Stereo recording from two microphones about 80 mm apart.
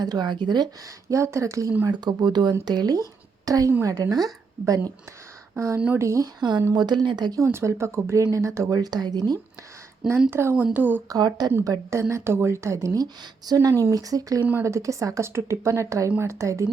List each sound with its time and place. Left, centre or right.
0.0 s speech: right
1.1 s speech: right
2.0 s speech: right
5.5 s speech: right
6.7 s speech: right
7.3 s speech: right
8.8 s speech: right
10.2 s speech: right
11.1 s speech: right
11.6 s speech: right